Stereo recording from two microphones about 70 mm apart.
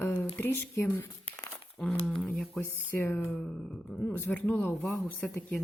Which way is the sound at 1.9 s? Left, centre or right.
Centre.